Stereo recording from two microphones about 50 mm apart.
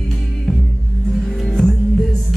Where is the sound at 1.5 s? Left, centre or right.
Centre.